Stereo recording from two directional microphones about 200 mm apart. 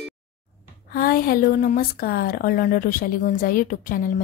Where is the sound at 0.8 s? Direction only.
45° left (ahead or behind).